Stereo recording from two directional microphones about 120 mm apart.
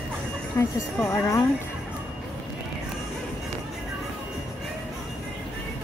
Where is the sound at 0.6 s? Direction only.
20° left (ahead or behind).